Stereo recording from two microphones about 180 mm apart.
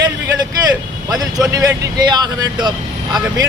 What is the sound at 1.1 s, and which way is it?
A man's voice, 20° right (ahead or behind).